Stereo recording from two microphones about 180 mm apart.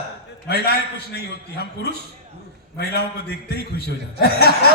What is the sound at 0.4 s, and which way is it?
Speech, 60° left (ahead or behind).